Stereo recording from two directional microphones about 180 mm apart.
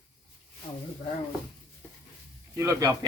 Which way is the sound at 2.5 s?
15° right (ahead or behind).